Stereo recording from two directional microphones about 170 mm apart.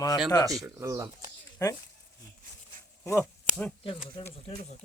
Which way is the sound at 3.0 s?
15° left (ahead or behind).